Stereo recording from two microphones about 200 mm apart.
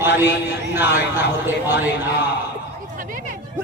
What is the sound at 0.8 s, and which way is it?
Speech, 10° right (ahead or behind).